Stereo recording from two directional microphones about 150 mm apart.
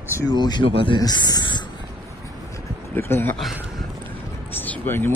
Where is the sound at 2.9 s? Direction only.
15° left (ahead or behind).